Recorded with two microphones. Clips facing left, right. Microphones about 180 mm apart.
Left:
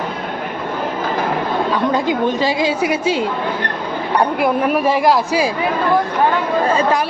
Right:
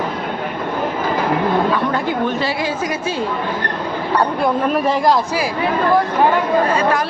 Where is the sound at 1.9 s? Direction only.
15° left (ahead or behind).